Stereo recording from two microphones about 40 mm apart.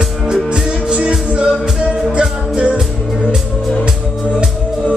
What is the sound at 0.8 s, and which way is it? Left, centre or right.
Music, right.